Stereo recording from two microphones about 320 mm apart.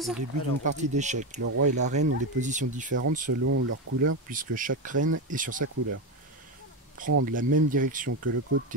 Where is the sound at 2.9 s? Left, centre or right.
Right.